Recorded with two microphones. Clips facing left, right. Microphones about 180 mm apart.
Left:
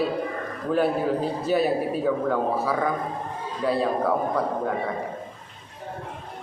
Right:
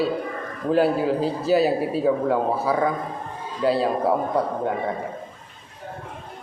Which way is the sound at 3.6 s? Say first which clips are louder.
Right 3 dB; 30° right (ahead or behind).